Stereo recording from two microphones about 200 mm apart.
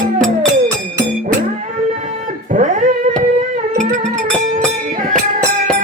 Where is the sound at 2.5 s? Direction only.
40° right (ahead or behind).